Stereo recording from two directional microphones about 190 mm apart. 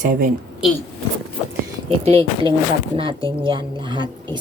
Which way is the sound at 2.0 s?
30° right (ahead or behind).